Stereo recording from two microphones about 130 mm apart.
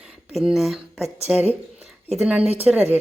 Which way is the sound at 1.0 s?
55° right (ahead or behind).